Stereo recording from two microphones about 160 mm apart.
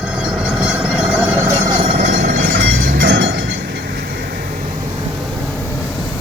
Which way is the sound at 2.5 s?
80° right.